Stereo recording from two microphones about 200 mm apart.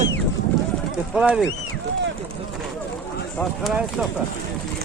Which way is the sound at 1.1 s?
Centre (ahead or behind).